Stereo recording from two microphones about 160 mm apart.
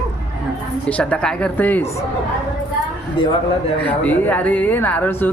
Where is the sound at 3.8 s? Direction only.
10° left (ahead or behind).